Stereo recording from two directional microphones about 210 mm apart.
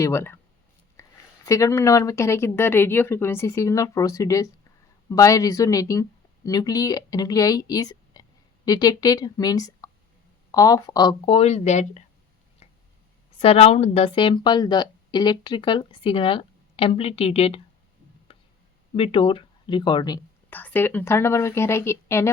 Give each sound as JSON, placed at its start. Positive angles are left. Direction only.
{"t": 0.0, "sound": "speech", "side_deg": 10}
{"t": 1.0, "sound": "a sound", "side_deg": 15}
{"t": 1.5, "sound": "a woman's voice", "side_deg": 15}
{"t": 13.4, "sound": "a woman's voice", "side_deg": 30}
{"t": 18.3, "sound": "tick", "side_deg": 25}
{"t": 18.9, "sound": "a woman's voice", "side_deg": 25}
{"t": 20.5, "sound": "speech", "side_deg": 10}